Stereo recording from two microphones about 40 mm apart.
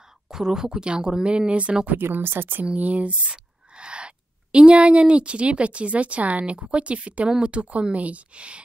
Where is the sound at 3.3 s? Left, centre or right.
Right.